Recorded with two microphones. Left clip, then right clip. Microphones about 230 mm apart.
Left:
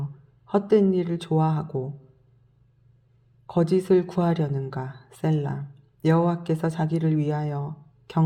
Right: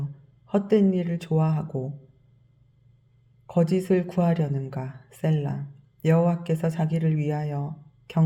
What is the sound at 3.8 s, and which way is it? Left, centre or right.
Speech, centre.